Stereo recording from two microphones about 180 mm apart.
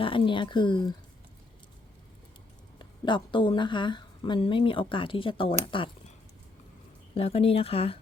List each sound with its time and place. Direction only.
0.0 s a woman's voice: 30° left (ahead or behind)
2.7 s a woman's voice: 25° left (ahead or behind)